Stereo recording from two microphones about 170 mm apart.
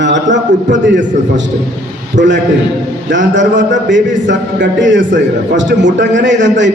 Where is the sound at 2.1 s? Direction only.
90° right.